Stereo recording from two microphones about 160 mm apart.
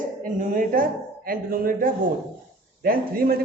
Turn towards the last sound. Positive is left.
turn(degrees=-65)  # may be behind; listen again after turning